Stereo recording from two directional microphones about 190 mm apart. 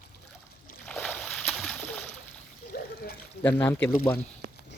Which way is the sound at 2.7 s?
55° left (ahead or behind).